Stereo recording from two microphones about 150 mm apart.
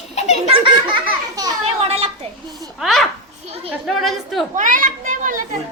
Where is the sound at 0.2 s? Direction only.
50° left (ahead or behind).